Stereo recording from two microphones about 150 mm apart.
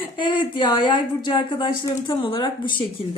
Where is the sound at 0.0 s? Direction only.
35° left (ahead or behind).